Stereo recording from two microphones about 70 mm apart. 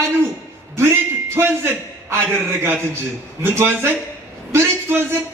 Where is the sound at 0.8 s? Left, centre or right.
Right.